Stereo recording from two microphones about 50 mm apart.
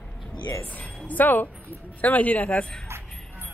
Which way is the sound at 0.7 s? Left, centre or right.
Left.